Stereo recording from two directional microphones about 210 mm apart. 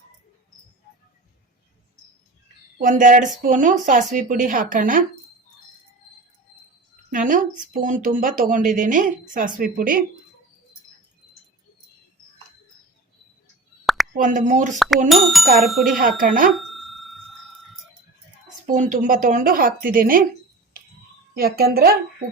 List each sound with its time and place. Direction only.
2.8 s speech: 35° right (ahead or behind)
7.1 s speech: 40° right (ahead or behind)
13.8 s plop: centre (ahead or behind)
14.2 s speech: 35° right (ahead or behind)
14.8 s speech: centre (ahead or behind)
16.0 s speech: 40° right (ahead or behind)
16.5 s a sound: centre (ahead or behind)
18.6 s speech: 40° right (ahead or behind)
21.3 s a woman's voice: 45° right (ahead or behind)